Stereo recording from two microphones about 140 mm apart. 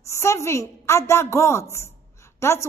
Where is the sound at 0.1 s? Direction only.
20° left (ahead or behind).